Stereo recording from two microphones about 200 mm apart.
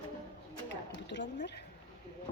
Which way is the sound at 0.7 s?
60° left (ahead or behind).